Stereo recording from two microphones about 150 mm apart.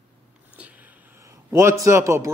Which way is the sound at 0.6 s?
10° right (ahead or behind).